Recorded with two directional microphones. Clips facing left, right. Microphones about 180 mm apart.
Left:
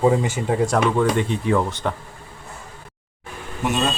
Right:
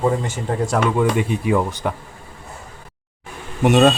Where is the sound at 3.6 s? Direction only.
70° right (ahead or behind).